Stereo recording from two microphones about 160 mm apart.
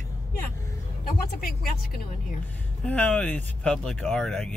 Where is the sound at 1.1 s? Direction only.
65° left (ahead or behind).